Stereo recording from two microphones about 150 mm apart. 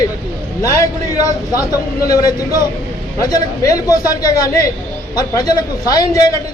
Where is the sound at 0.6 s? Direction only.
20° left (ahead or behind).